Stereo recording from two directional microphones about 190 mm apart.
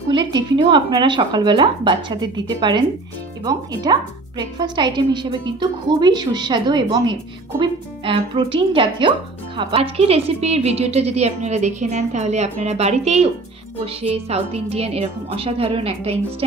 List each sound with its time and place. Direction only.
0.1 s a woman's voice: 25° right (ahead or behind)